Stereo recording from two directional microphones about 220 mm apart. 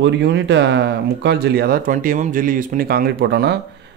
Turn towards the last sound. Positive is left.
turn(degrees=-45)  # may be behind; listen again after turning